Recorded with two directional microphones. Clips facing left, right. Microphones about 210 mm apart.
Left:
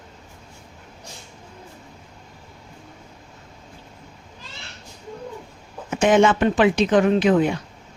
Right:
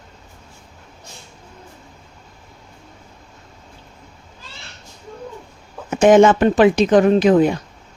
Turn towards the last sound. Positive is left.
turn(degrees=-40)  # may be behind; listen again after turning